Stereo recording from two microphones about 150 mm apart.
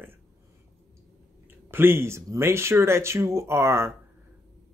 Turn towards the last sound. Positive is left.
turn(degrees=-20)  # may be behind; listen again after turning